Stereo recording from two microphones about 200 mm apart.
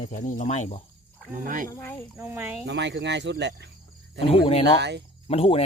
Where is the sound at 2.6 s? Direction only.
60° right (ahead or behind).